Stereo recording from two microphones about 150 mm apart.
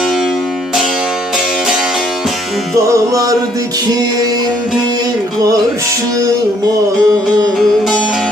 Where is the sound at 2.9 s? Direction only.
20° right (ahead or behind).